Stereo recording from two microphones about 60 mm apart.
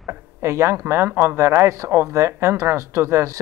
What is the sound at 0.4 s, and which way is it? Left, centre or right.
Speech, right.